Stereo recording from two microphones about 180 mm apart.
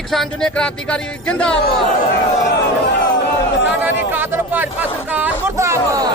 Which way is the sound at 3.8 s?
10° right (ahead or behind).